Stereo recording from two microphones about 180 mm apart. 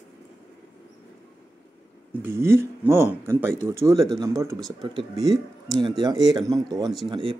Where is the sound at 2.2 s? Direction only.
15° right (ahead or behind).